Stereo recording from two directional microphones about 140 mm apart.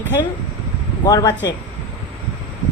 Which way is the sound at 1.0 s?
25° left (ahead or behind).